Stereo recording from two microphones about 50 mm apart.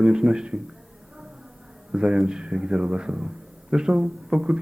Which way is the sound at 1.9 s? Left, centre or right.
Centre.